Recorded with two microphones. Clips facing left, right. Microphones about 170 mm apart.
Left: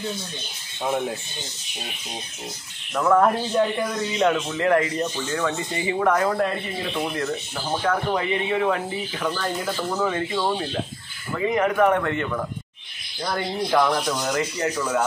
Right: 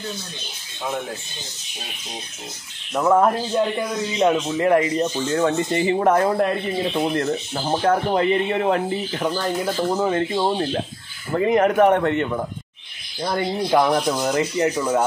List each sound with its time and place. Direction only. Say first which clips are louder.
2.9 s speech: right 2 dB; 20° right (ahead or behind)
3.2 s speech: right 1 dB; 5° right (ahead or behind)
4.3 s speech: right 4 dB; 20° right (ahead or behind)
5.3 s speech: right 6 dB; 40° right (ahead or behind)
7.1 s speech: right 5 dB; 40° right (ahead or behind)
11.3 s speech: right 4 dB; 45° right (ahead or behind)
12.0 s speech: right 4 dB; 25° right (ahead or behind)